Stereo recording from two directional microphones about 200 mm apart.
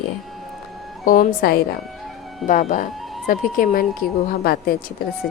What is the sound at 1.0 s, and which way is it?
A woman's voice, 45° left (ahead or behind).